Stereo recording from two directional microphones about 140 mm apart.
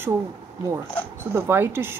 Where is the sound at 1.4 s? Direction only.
15° right (ahead or behind).